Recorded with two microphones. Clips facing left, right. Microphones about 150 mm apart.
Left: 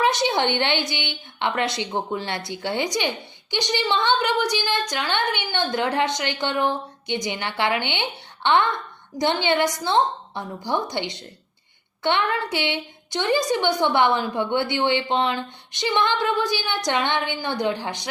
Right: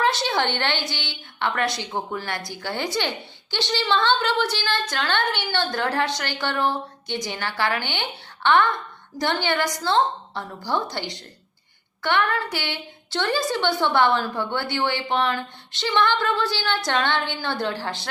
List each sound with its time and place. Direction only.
0.0 s a woman's voice: 20° left (ahead or behind)